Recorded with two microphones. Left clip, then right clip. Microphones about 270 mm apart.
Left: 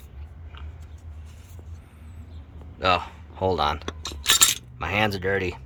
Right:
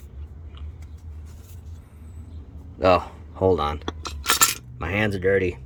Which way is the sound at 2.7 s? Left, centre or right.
Centre.